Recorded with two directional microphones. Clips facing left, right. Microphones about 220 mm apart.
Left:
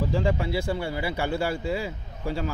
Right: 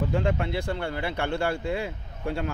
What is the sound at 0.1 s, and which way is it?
Speech, 5° left (ahead or behind).